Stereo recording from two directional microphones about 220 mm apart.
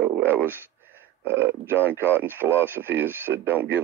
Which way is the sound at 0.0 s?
10° right (ahead or behind).